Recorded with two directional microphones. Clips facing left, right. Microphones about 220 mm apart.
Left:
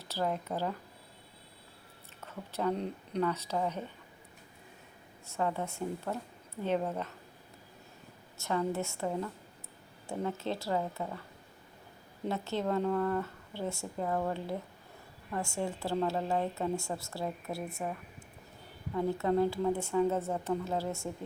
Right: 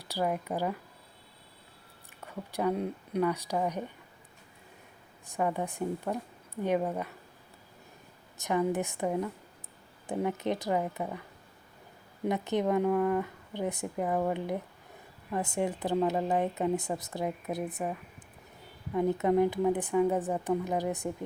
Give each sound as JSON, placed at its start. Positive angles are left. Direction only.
{"t": 0.0, "sound": "speech", "side_deg": -15}
{"t": 2.2, "sound": "speech", "side_deg": -10}
{"t": 5.2, "sound": "speech", "side_deg": -15}
{"t": 8.4, "sound": "speech", "side_deg": -15}
{"t": 12.2, "sound": "a woman's voice", "side_deg": -15}
{"t": 18.9, "sound": "speech", "side_deg": -20}